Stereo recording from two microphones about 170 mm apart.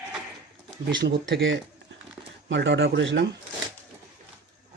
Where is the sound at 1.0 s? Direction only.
90° right.